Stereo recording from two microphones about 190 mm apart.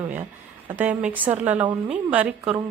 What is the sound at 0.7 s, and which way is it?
A woman's voice, 10° right (ahead or behind).